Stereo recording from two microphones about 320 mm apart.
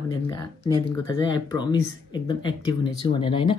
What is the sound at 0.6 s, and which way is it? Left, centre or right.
Speech, centre.